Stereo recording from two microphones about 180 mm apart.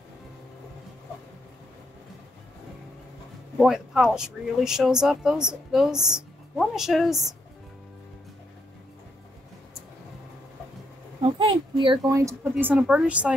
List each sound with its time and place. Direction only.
3.5 s speech: centre (ahead or behind)
11.2 s speech: 30° right (ahead or behind)
12.2 s a woman's voice: 15° right (ahead or behind)